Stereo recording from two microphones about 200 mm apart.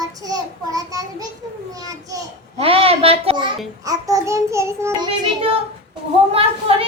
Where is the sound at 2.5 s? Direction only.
30° right (ahead or behind).